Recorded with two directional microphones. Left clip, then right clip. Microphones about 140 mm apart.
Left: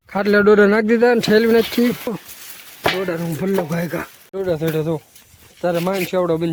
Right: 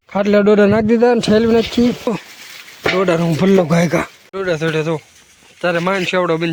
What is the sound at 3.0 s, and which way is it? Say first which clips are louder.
Speech: right 8 dB; 40° right (ahead or behind).